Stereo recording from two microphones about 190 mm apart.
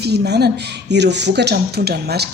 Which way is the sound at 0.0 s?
60° right (ahead or behind).